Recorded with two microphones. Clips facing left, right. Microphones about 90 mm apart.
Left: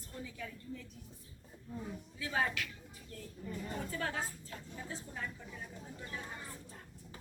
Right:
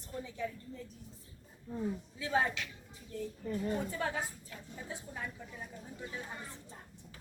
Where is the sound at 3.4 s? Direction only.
50° right (ahead or behind).